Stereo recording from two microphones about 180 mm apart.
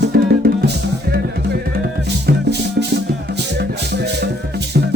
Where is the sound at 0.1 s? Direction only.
60° right (ahead or behind).